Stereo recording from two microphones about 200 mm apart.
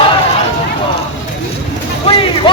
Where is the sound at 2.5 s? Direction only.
25° left (ahead or behind).